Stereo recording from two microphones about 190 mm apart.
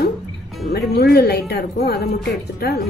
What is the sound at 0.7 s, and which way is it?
Speech, 55° left (ahead or behind).